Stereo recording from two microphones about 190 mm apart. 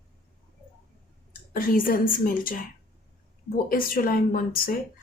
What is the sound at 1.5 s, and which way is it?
A woman's voice, 50° left (ahead or behind).